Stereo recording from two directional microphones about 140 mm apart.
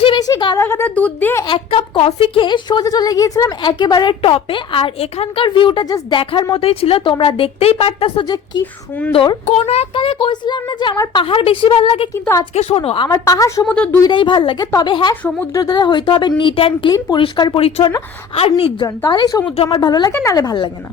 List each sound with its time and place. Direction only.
0.0 s a sound: 30° left (ahead or behind)
0.6 s a woman's voice: 15° left (ahead or behind)
1.5 s speech: 40° left (ahead or behind)
8.2 s a woman's voice: 30° left (ahead or behind)
9.5 s a woman's voice: 50° left (ahead or behind); by 11.2 s 25° left (ahead or behind)
11.2 s a woman's voice: 40° left (ahead or behind)
13.1 s a woman's voice: 25° left (ahead or behind)
13.7 s a woman's voice: 10° left (ahead or behind)
14.0 s speech: 35° left (ahead or behind)
19.0 s a woman's voice: 30° left (ahead or behind)